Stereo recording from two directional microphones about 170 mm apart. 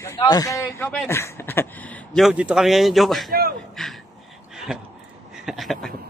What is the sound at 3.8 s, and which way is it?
Speech, centre (ahead or behind).